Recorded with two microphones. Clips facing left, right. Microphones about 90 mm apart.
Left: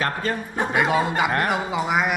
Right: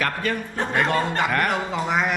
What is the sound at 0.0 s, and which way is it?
Speech, 25° left (ahead or behind).